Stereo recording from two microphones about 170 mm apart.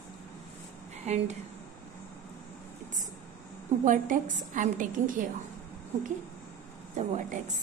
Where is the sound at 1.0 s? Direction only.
40° right (ahead or behind).